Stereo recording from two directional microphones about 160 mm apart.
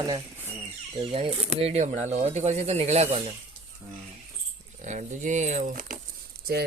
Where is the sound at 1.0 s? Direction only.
35° right (ahead or behind).